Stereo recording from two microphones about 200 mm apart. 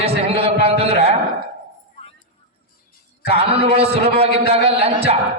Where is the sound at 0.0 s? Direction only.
30° right (ahead or behind).